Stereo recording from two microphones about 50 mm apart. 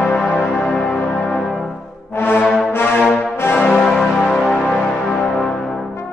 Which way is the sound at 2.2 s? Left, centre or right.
Left.